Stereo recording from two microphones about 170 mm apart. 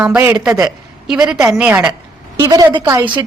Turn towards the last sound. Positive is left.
turn(degrees=-15)  # may be behind; listen again after turning